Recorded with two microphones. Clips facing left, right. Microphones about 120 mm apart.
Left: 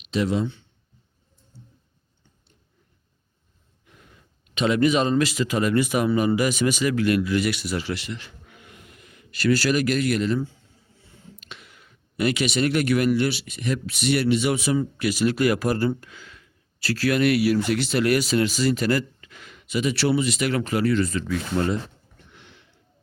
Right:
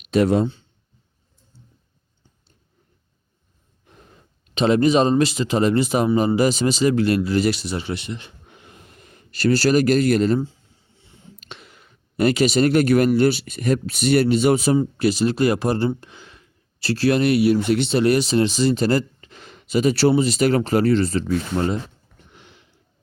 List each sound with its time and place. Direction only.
0.0 s speech: 55° right (ahead or behind)
3.8 s speech: 35° right (ahead or behind)
14.8 s speech: 30° right (ahead or behind)